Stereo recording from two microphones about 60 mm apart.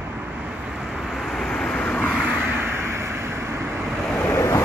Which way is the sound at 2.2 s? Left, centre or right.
Right.